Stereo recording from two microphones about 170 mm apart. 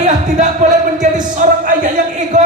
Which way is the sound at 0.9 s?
50° right (ahead or behind).